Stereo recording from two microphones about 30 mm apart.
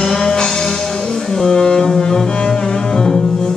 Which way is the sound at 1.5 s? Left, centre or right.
Left.